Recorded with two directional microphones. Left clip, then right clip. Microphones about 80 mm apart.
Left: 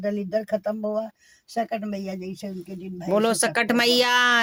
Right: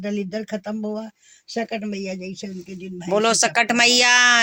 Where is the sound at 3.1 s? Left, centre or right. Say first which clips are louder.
Right 3 dB; left.